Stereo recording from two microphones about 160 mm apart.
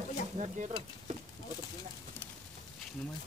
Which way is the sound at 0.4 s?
45° right (ahead or behind).